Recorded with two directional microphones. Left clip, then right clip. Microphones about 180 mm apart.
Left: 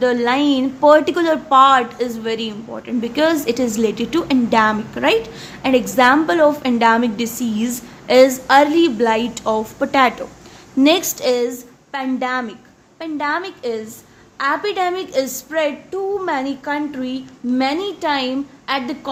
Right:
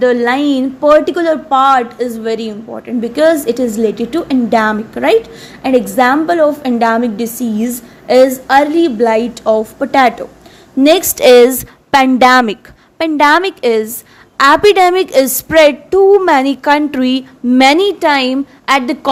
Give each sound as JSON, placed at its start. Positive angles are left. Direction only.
{"t": 0.0, "sound": "a woman's voice", "side_deg": -25}
{"t": 11.1, "sound": "a woman's voice", "side_deg": -45}